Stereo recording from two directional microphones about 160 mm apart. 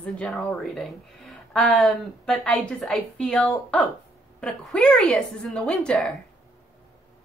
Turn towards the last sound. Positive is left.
turn(degrees=5)  # may be behind; listen again after turning